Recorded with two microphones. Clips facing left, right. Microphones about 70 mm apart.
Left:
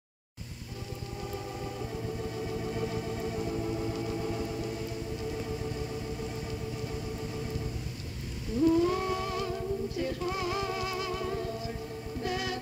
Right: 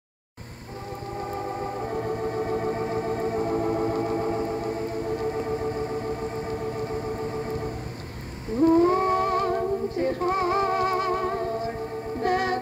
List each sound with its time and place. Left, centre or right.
1.2 s music: right
8.5 s humming: right
12.2 s music: right